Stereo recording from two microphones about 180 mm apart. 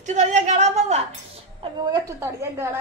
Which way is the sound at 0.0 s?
40° right (ahead or behind).